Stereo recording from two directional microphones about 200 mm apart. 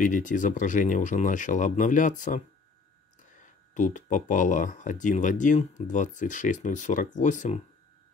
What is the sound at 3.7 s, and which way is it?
Speech, 40° left (ahead or behind).